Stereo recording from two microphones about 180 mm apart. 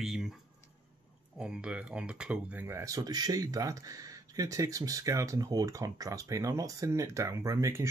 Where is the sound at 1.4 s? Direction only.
5° right (ahead or behind).